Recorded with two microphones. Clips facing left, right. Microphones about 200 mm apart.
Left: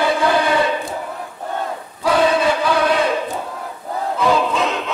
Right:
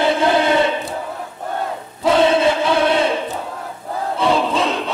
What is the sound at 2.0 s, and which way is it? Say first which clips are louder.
Crowd: right 2 dB; 25° right (ahead or behind).